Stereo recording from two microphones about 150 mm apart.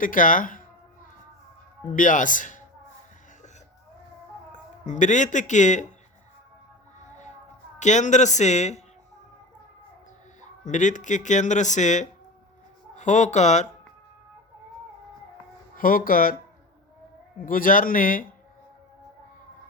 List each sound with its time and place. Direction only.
0.0 s speech: 65° left (ahead or behind)
1.9 s speech: 60° left (ahead or behind)
4.9 s speech: 55° left (ahead or behind)
7.8 s speech: 55° left (ahead or behind)
10.4 s speech: 55° left (ahead or behind)
15.7 s speech: 70° left (ahead or behind)
17.3 s speech: 70° left (ahead or behind)